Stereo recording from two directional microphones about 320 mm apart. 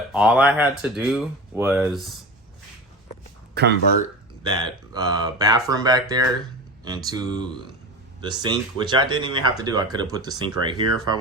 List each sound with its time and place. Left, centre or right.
0.1 s speech: centre
3.5 s speech: right
4.9 s speech: centre